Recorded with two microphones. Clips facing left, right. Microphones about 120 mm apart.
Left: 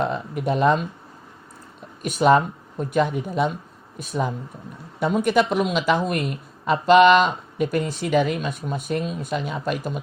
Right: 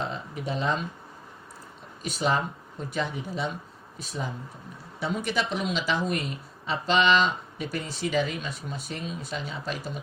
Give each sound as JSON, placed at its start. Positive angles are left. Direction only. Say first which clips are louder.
{"t": 0.0, "sound": "speech", "louder": "left 8 dB", "side_deg": 60}
{"t": 2.0, "sound": "speech", "louder": "left 9 dB", "side_deg": 55}